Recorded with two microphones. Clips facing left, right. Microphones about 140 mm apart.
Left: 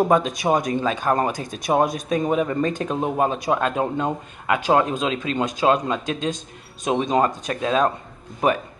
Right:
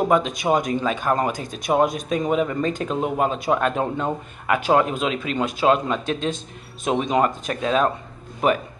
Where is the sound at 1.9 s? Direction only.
25° right (ahead or behind).